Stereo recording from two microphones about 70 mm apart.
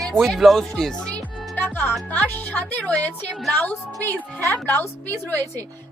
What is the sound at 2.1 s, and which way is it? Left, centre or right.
A woman's voice, left.